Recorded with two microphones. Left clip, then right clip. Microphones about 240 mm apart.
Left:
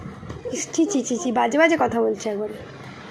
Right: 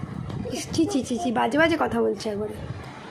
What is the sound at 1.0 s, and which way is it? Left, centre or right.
Speech, right.